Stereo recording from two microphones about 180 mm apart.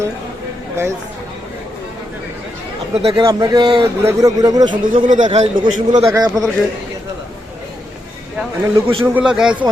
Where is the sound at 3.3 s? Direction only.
20° right (ahead or behind).